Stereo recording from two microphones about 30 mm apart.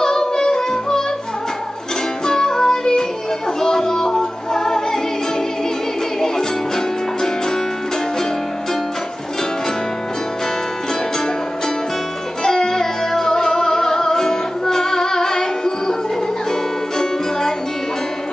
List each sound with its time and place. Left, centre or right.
0.0 s music: centre
2.2 s music: centre
12.4 s music: centre
17.0 s music: centre